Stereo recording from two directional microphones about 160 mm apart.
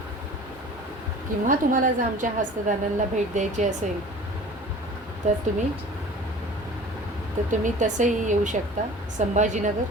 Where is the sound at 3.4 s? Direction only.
50° right (ahead or behind).